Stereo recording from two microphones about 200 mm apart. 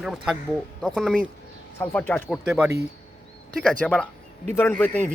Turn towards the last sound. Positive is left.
turn(degrees=10)  # may be behind; listen again after turning